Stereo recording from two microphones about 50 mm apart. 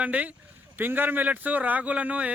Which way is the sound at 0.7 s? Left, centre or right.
Right.